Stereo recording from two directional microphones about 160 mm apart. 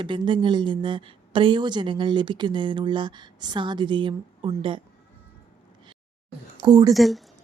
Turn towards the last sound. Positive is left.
turn(degrees=0)  # may be behind; listen again after turning